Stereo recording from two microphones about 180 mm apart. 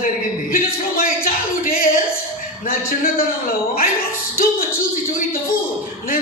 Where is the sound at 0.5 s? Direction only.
55° left (ahead or behind).